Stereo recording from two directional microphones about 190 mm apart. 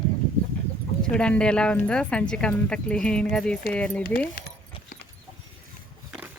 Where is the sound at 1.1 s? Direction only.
5° left (ahead or behind).